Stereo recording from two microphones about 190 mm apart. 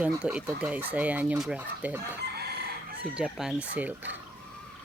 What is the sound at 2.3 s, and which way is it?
Chicken, 55° right (ahead or behind).